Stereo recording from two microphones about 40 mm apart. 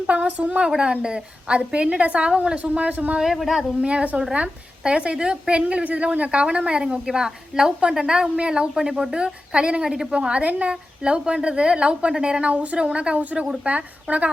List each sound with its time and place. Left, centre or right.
0.1 s a woman's voice: right
3.4 s speech: centre
3.8 s a woman's voice: right
8.7 s a woman's voice: centre
10.1 s a woman's voice: right